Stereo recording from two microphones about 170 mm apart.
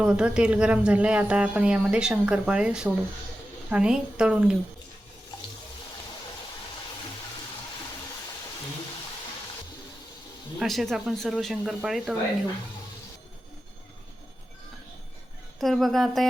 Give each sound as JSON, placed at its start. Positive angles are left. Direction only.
{"t": 0.0, "sound": "speech", "side_deg": -5}
{"t": 10.6, "sound": "speech", "side_deg": 0}
{"t": 15.6, "sound": "speech", "side_deg": 0}